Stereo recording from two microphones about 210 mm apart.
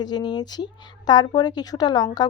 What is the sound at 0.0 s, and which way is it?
A woman's voice, 20° left (ahead or behind).